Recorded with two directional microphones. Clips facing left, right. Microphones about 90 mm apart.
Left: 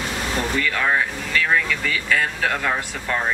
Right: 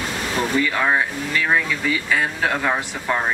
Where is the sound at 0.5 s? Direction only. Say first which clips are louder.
Right 2 dB; 15° right (ahead or behind).